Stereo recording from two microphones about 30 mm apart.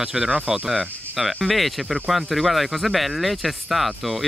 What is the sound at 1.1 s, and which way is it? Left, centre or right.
Speech, centre.